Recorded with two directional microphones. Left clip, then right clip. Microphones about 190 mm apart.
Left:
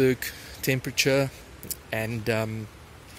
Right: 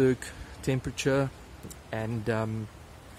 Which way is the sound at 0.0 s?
5° right (ahead or behind).